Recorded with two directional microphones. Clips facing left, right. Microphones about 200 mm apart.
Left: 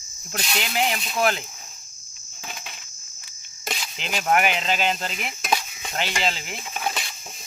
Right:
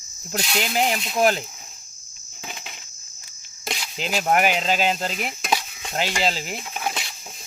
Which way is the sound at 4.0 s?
40° right (ahead or behind).